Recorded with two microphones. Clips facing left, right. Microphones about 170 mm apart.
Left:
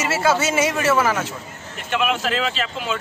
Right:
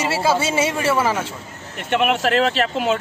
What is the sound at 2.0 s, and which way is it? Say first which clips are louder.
Speech: right 5 dB; 60° right (ahead or behind).